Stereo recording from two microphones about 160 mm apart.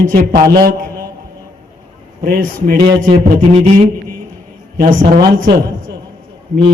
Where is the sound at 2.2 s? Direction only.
65° right (ahead or behind).